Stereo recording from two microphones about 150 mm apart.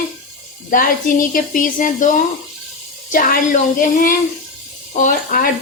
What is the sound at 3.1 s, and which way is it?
Speech, 65° left (ahead or behind).